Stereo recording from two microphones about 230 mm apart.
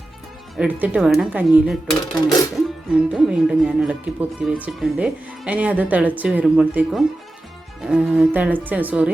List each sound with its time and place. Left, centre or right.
0.5 s speech: centre
2.0 s speech: centre
2.6 s speech: centre